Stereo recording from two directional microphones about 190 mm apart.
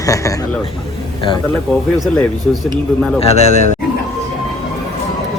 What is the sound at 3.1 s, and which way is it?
Speech, 35° left (ahead or behind).